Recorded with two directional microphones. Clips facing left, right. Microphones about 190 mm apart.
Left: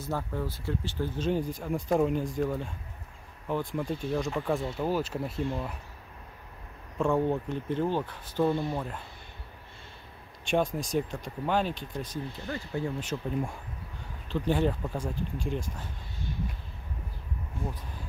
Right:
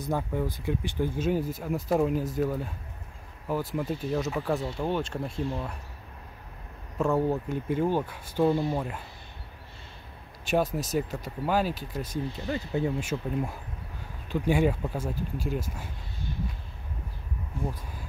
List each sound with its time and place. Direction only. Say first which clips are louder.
0.0 s speech: right 4 dB; 15° right (ahead or behind); by 5.8 s centre (ahead or behind)
7.0 s speech: right 1 dB; 5° right (ahead or behind)
10.4 s speech: right 1 dB; 5° right (ahead or behind); by 12.9 s 20° right (ahead or behind)
13.0 s speech: right 1 dB; 5° right (ahead or behind)